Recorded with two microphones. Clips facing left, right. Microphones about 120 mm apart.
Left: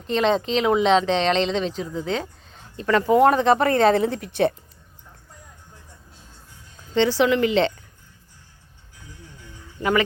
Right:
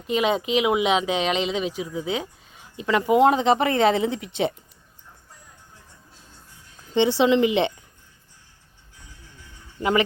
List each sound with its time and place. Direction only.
0.1 s a woman's voice: 10° right (ahead or behind)
6.9 s a woman's voice: 20° right (ahead or behind)